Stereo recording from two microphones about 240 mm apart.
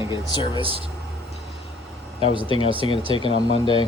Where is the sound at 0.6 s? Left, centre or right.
Right.